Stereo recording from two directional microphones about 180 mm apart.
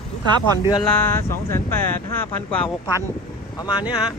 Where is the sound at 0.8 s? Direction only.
10° left (ahead or behind).